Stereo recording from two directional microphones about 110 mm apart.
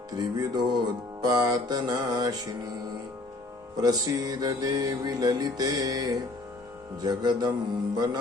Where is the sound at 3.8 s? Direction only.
35° right (ahead or behind).